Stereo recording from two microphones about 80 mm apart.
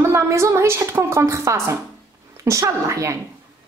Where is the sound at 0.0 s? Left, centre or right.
Right.